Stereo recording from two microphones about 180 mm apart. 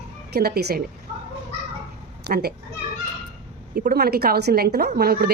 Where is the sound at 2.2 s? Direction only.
60° right (ahead or behind).